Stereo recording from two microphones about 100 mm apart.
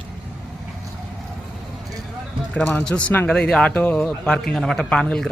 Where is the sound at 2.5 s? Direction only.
15° left (ahead or behind).